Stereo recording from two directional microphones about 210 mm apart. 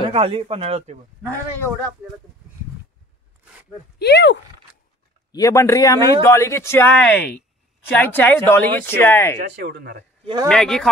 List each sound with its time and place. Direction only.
0.0 s a man's voice: 25° right (ahead or behind)
4.0 s speech: 55° left (ahead or behind)
5.3 s speech: 15° left (ahead or behind)
9.4 s speech: 50° right (ahead or behind)
10.2 s speech: 20° right (ahead or behind)
10.5 s speech: 5° left (ahead or behind)